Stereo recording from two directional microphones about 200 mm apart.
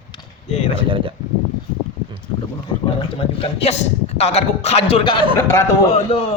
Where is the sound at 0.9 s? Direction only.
25° right (ahead or behind).